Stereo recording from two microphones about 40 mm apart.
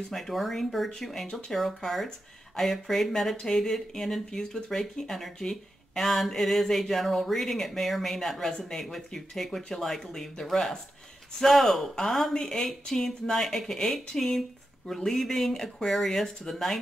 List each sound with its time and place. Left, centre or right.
0.1 s speech: centre
11.9 s speech: centre